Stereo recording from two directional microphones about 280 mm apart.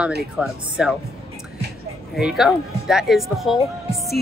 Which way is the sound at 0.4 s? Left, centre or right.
Centre.